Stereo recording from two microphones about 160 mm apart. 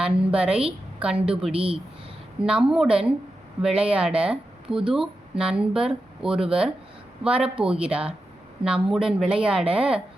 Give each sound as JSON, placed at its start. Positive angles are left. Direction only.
{"t": 0.0, "sound": "speech", "side_deg": -5}
{"t": 1.5, "sound": "speech", "side_deg": -35}
{"t": 2.4, "sound": "speech", "side_deg": -5}